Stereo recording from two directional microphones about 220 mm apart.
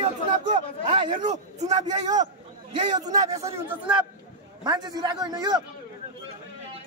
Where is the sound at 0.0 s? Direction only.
25° right (ahead or behind).